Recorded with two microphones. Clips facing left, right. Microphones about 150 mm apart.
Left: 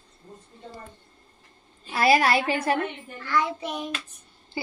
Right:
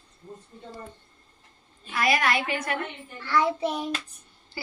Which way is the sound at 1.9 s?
30° left (ahead or behind).